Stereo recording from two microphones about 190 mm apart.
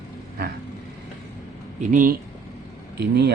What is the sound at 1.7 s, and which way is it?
Speech, 45° right (ahead or behind).